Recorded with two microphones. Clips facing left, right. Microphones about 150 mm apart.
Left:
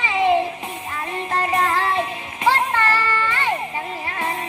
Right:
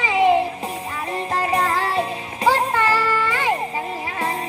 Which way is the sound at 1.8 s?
35° right (ahead or behind).